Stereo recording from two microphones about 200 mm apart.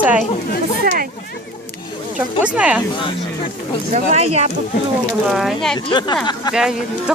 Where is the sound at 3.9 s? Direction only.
35° right (ahead or behind).